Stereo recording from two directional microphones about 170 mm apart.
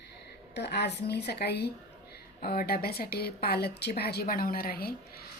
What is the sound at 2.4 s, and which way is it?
A woman's voice, 60° left (ahead or behind).